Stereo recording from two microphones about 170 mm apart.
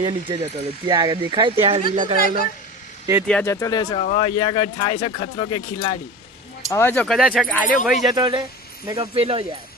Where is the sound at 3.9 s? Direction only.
40° left (ahead or behind).